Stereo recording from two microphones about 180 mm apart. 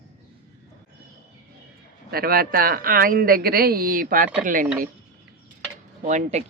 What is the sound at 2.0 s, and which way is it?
Speech, 55° right (ahead or behind).